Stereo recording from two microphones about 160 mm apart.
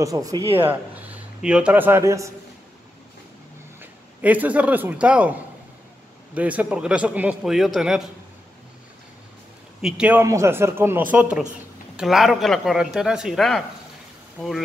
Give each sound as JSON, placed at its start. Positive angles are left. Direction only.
{"t": 0.0, "sound": "speech", "side_deg": -20}
{"t": 0.6, "sound": "a man's voice", "side_deg": -10}
{"t": 3.8, "sound": "a man's voice", "side_deg": -10}
{"t": 9.8, "sound": "speech", "side_deg": -5}
{"t": 10.2, "sound": "a man's voice", "side_deg": -20}